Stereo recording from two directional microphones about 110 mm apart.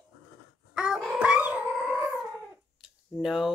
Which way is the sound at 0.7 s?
10° right (ahead or behind).